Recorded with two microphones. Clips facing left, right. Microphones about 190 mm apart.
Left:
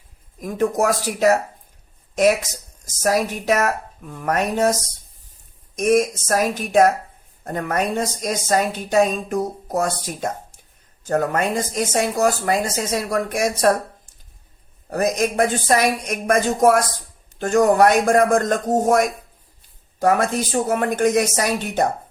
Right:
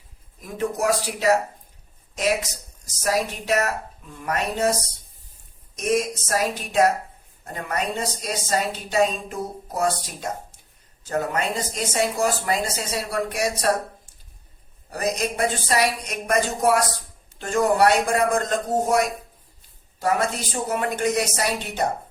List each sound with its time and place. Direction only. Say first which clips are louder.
0.4 s a woman's voice: left 4 dB; 50° left (ahead or behind)
5.7 s a woman's voice: left 6 dB; 50° left (ahead or behind)
14.8 s a woman's voice: left 5 dB; 50° left (ahead or behind)